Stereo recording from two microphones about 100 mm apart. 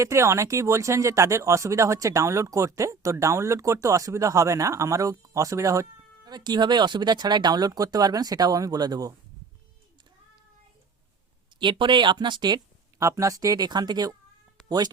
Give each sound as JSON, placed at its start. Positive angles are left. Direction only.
{"t": 0.0, "sound": "speech", "side_deg": -30}
{"t": 11.6, "sound": "speech", "side_deg": -55}
{"t": 13.0, "sound": "speech", "side_deg": -30}